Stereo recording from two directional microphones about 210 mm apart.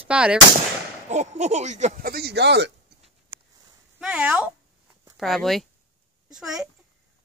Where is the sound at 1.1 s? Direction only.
35° right (ahead or behind); by 2.7 s 55° right (ahead or behind).